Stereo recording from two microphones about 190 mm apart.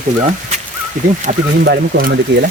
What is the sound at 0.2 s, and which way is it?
Speech, 35° right (ahead or behind).